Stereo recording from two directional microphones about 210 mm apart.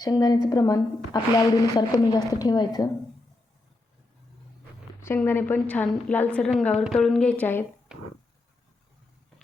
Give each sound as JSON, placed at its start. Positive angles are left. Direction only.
{"t": 0.0, "sound": "a woman's voice", "side_deg": 15}
{"t": 4.9, "sound": "a woman's voice", "side_deg": 10}
{"t": 7.9, "sound": "a sound", "side_deg": -5}